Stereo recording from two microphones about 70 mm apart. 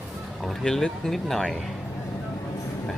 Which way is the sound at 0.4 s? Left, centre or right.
Centre.